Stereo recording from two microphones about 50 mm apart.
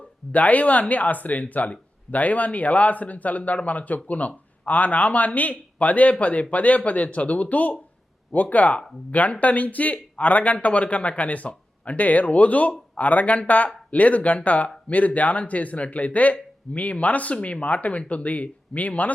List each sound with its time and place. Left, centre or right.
0.3 s speech: left